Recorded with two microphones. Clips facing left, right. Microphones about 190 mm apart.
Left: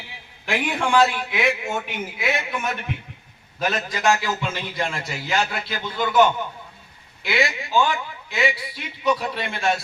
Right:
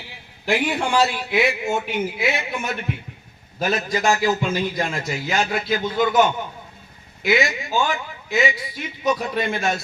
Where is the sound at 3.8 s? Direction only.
40° right (ahead or behind).